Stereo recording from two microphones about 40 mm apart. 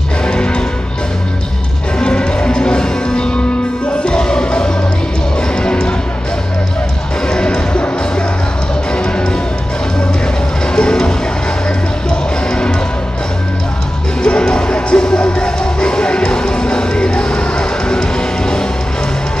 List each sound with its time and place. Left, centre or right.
0.2 s music: left
2.0 s music: left
7.2 s music: left
8.9 s music: left
10.7 s music: centre
14.2 s music: left